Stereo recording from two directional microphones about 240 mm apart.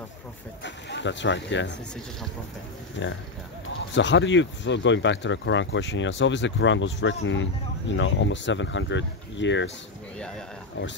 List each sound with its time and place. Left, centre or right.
0.7 s speech: left
3.0 s speech: left
10.1 s a sound: centre